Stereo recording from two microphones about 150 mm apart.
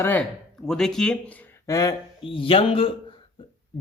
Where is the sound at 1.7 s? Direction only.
25° left (ahead or behind).